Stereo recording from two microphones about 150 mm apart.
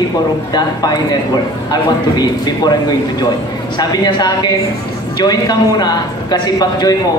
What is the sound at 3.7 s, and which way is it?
A man's voice, 30° left (ahead or behind).